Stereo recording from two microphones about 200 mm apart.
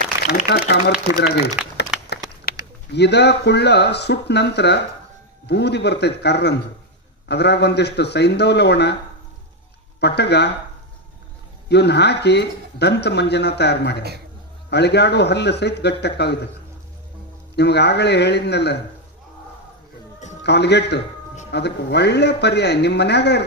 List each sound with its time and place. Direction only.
0.3 s speech: 55° left (ahead or behind)
1.6 s speech: 5° right (ahead or behind)
2.6 s bird: 15° right (ahead or behind)
2.9 s speech: 55° left (ahead or behind)
9.9 s speech: 55° left (ahead or behind)
11.7 s speech: 55° left (ahead or behind)
17.6 s speech: 55° left (ahead or behind)
20.4 s speech: 55° left (ahead or behind)